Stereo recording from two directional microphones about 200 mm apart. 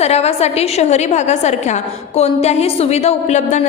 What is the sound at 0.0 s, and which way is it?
A woman's voice, 30° left (ahead or behind).